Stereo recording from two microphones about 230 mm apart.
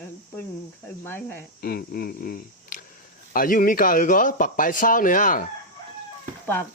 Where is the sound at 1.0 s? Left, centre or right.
Centre.